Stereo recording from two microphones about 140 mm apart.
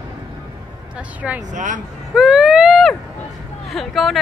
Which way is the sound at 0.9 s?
10° right (ahead or behind).